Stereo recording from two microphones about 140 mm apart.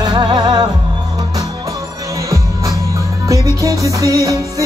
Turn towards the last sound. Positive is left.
turn(degrees=-25)  # may be behind; listen again after turning